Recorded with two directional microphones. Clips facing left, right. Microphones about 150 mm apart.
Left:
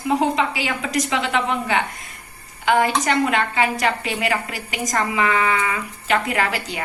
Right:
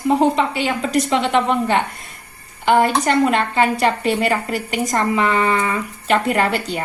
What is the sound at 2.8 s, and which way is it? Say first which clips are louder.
Speech: right 4 dB; 45° right (ahead or behind).